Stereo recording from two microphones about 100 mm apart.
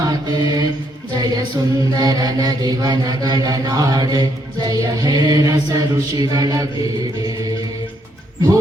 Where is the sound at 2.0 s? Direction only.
40° right (ahead or behind).